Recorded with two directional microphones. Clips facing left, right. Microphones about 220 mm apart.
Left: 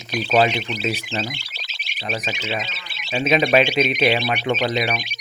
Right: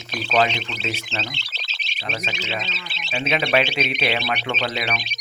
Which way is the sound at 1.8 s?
15° left (ahead or behind).